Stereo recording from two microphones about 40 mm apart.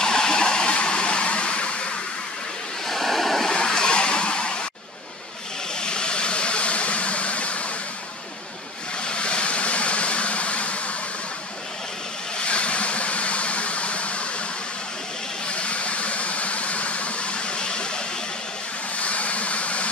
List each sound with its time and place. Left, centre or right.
0.0 s a sound: centre
2.9 s waves: centre
3.4 s vehicle: left
5.8 s vehicle: left
9.0 s vehicle: left
12.4 s vehicle: left
15.4 s vehicle: left
18.9 s vehicle: left